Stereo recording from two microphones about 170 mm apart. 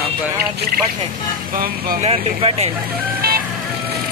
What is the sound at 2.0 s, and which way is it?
Speech, 35° right (ahead or behind).